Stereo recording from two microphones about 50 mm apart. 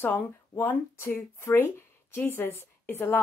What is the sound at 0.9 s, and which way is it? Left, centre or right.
A woman's voice, left.